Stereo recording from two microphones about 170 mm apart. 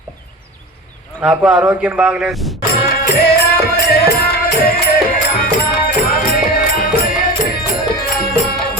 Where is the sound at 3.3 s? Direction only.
70° left (ahead or behind).